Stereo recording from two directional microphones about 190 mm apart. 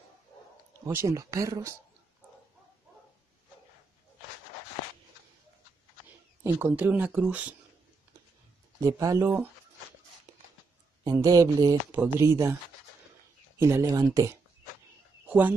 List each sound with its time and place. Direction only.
0.8 s speech: 15° right (ahead or behind)
6.4 s speech: 10° right (ahead or behind)
8.8 s speech: 15° right (ahead or behind)
11.1 s speech: 20° right (ahead or behind)
13.6 s speech: 15° right (ahead or behind)